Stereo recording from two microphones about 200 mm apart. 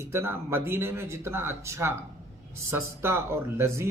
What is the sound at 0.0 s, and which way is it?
A man's voice, 10° right (ahead or behind).